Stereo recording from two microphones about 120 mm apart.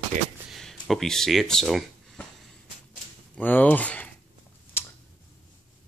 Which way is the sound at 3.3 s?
15° left (ahead or behind).